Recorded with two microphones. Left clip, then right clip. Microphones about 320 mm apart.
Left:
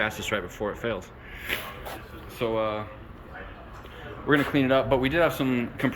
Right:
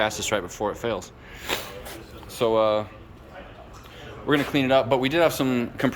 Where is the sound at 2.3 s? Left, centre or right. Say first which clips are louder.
Right 7 dB; centre.